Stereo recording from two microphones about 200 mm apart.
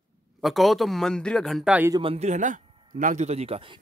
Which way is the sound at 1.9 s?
25° right (ahead or behind).